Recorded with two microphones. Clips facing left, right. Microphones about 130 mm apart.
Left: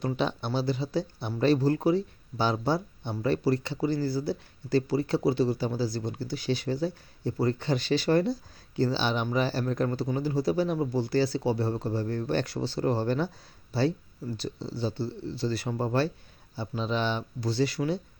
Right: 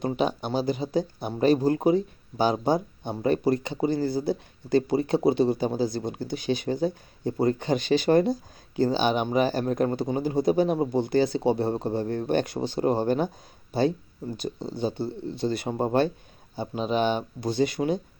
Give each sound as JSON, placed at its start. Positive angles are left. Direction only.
{"t": 0.2, "sound": "speech", "side_deg": -15}
{"t": 15.0, "sound": "speech", "side_deg": -50}
{"t": 15.4, "sound": "speech", "side_deg": -20}